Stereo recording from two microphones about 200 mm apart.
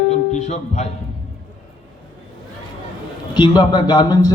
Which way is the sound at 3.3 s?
20° left (ahead or behind).